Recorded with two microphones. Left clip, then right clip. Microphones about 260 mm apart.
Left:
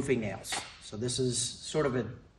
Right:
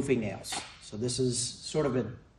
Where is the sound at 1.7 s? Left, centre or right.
Centre.